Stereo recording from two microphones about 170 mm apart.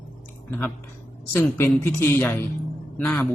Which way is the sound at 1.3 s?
15° left (ahead or behind).